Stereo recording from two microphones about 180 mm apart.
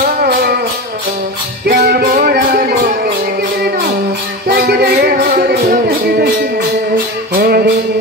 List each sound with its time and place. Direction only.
0.0 s music: 55° right (ahead or behind)
1.7 s music: 65° right (ahead or behind)
4.5 s music: 65° right (ahead or behind)
7.3 s music: 60° right (ahead or behind)